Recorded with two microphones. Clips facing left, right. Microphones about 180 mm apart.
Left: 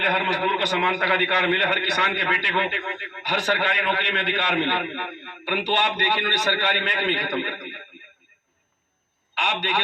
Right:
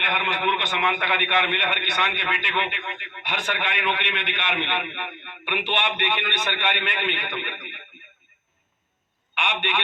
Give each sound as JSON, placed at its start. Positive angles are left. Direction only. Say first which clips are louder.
{"t": 0.0, "sound": "a man's voice", "louder": "left 3 dB", "side_deg": 40}
{"t": 9.3, "sound": "a man's voice", "louder": "left 1 dB", "side_deg": 35}